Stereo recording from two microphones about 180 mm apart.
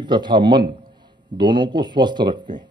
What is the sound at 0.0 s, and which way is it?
A man's voice, 25° right (ahead or behind).